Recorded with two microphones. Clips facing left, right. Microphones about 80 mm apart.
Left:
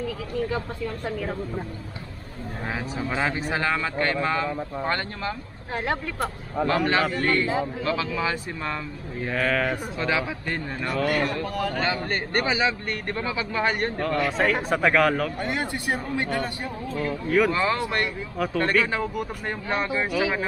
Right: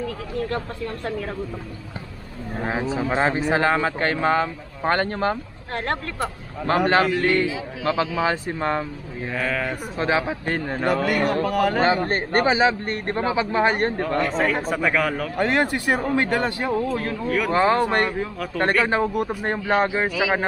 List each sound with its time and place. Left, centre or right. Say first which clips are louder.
2.6 s speech: right 6 dB; right
6.7 s speech: right 6 dB; right
9.3 s speech: left 1 dB; centre
9.9 s speech: right 4 dB; right
11.4 s speech: right 7 dB; right
11.8 s speech: right 6 dB; right
14.1 s speech: left 1 dB; centre
15.3 s speech: right 7 dB; right
17.5 s speech: right 6 dB; right